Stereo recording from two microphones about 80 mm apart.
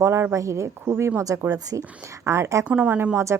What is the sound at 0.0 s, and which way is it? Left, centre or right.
Speech, right.